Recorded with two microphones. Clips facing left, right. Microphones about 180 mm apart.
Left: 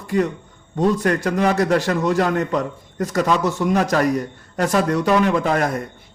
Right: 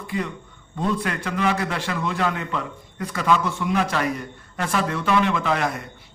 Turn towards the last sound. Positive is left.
turn(degrees=45)  # may be behind; listen again after turning